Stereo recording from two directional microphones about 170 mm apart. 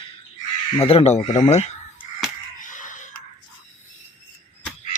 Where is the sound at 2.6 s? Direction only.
50° left (ahead or behind).